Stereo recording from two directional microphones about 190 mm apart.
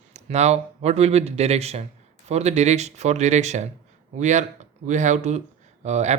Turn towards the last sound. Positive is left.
turn(degrees=-35)  # may be behind; listen again after turning